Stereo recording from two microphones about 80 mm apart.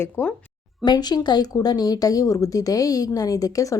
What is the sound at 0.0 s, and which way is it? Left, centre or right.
Speech, left.